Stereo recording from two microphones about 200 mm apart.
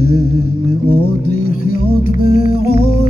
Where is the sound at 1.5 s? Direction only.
45° left (ahead or behind).